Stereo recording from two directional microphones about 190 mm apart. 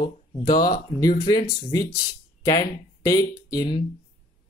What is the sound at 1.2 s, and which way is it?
Speech, 20° left (ahead or behind).